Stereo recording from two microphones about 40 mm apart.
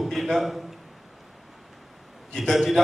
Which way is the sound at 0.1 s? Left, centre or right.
Centre.